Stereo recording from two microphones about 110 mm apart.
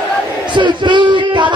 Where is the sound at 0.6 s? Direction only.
45° right (ahead or behind).